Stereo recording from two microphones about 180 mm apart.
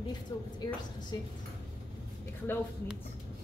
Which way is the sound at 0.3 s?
20° left (ahead or behind).